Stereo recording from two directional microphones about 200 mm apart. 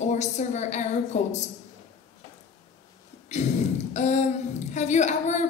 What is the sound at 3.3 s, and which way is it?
A woman's voice, 35° left (ahead or behind).